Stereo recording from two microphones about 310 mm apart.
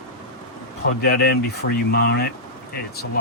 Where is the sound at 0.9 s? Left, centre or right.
Left.